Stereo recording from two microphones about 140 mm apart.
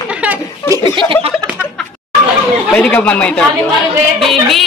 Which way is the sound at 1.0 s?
40° right (ahead or behind).